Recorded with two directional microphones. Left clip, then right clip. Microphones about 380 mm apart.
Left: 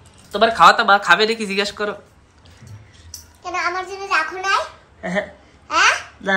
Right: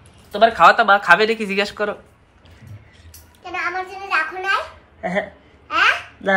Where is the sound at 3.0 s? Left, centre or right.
Centre.